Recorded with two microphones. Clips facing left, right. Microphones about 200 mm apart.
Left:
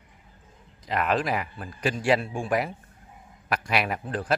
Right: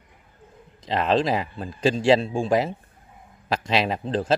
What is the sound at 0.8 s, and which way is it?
A man's voice, 25° right (ahead or behind).